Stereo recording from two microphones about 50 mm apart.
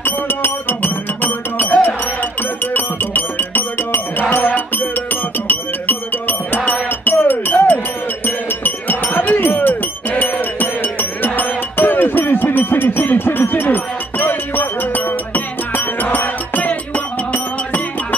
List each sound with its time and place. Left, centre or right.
0.0 s music: left